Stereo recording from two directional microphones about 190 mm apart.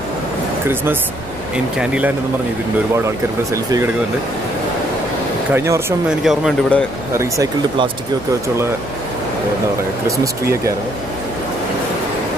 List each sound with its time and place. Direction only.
1.8 s speech: 5° right (ahead or behind)
3.5 s speech: 15° right (ahead or behind)
5.5 s speech: 15° right (ahead or behind)
6.0 s speech: centre (ahead or behind)
7.2 s speech: 20° right (ahead or behind)
10.0 s speech: 15° right (ahead or behind)